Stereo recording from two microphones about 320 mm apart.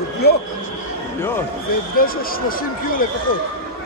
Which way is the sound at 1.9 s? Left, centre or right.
Left.